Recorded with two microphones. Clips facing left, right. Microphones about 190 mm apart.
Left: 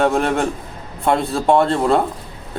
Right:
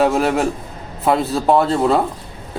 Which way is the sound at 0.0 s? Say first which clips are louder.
Right 1 dB; 5° right (ahead or behind).